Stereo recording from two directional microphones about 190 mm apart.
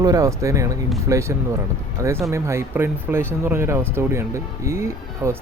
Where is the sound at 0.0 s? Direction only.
20° right (ahead or behind).